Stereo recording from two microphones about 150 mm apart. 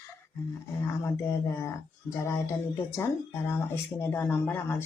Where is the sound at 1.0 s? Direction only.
20° left (ahead or behind).